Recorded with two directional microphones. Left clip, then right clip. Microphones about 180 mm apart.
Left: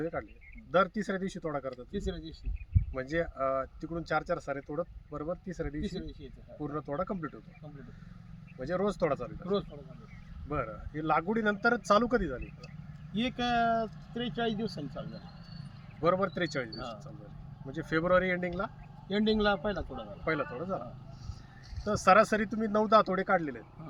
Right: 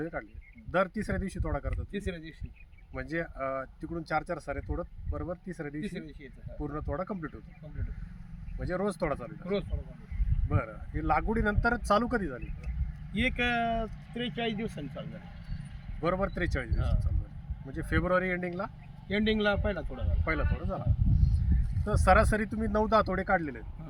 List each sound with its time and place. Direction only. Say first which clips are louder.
0.0 s speech: left 1 dB; 20° left (ahead or behind)
1.7 s speech: even; 10° right (ahead or behind)
2.9 s speech: left 2 dB; 20° left (ahead or behind)
8.5 s speech: left 1 dB; 15° left (ahead or behind)
10.5 s speech: left 1 dB; 20° left (ahead or behind)
13.1 s speech: right 1 dB; 15° right (ahead or behind)
16.0 s speech: left 2 dB; 15° left (ahead or behind)
19.0 s a man's voice: even; 15° right (ahead or behind)
20.2 s speech: left 1 dB; 15° left (ahead or behind)
21.8 s speech: left 1 dB; 20° left (ahead or behind)